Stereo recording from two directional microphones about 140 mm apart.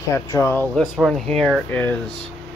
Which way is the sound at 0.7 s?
5° right (ahead or behind).